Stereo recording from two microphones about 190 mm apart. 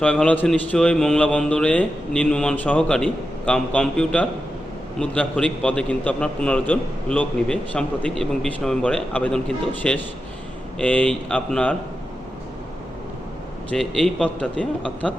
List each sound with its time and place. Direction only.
0.0 s a man's voice: 5° left (ahead or behind)
13.7 s a man's voice: 5° left (ahead or behind)